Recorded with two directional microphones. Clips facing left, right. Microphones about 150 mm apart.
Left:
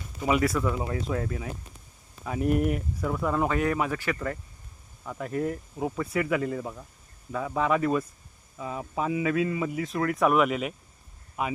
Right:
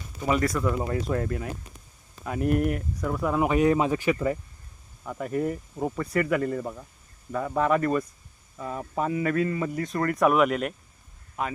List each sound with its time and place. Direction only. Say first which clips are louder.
0.2 s speech: even; 5° left (ahead or behind)
3.4 s speech: right 8 dB; 20° right (ahead or behind)
5.0 s speech: right 2 dB; 5° right (ahead or behind)